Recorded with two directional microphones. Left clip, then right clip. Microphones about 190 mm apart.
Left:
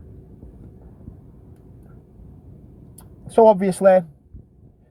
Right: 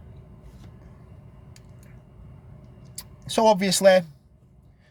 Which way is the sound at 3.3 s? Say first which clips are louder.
Left 6 dB; 15° right (ahead or behind).